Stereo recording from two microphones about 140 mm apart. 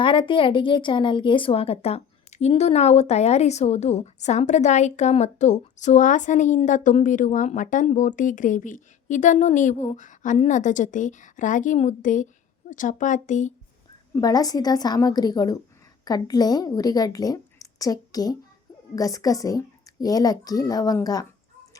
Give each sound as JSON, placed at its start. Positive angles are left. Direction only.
{"t": 0.0, "sound": "a woman's voice", "side_deg": 35}
{"t": 14.2, "sound": "a child's voice", "side_deg": 25}